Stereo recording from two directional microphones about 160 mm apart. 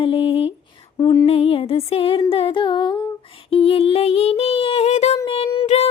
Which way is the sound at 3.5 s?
35° left (ahead or behind).